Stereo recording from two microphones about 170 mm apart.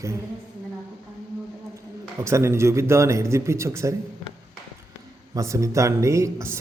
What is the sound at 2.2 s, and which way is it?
Speech, 15° right (ahead or behind).